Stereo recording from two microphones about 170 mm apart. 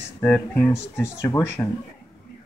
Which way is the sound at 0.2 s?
10° left (ahead or behind).